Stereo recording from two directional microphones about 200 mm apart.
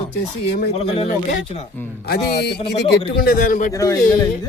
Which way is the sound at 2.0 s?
55° left (ahead or behind).